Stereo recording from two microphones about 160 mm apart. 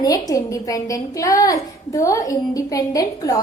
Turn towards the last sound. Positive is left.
turn(degrees=20)  # may be behind; listen again after turning